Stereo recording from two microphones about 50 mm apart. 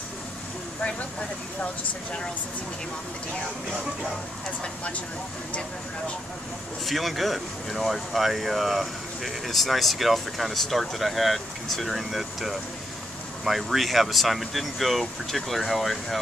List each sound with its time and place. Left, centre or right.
6.9 s speech: centre